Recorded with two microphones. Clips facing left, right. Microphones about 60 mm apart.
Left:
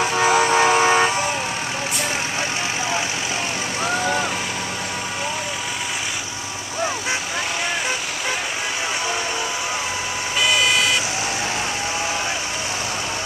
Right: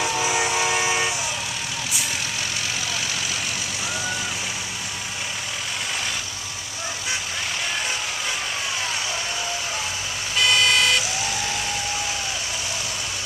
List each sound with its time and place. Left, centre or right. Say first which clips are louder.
0.0 s vehicle: left 6 dB; left
3.8 s vehicle: left 9 dB; left
10.4 s vehicle: even; centre